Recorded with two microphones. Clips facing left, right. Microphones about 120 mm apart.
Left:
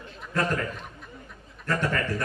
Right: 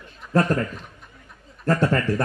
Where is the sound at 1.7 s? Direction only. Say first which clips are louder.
Right 6 dB; 35° right (ahead or behind).